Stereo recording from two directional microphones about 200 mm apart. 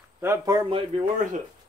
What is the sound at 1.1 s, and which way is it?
Speech, 40° right (ahead or behind).